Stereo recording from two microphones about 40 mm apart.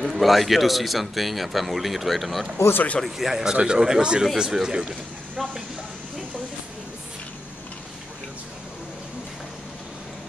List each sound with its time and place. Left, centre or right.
0.1 s speech: centre
2.5 s speech: left
3.2 s speech: centre
5.4 s speech: centre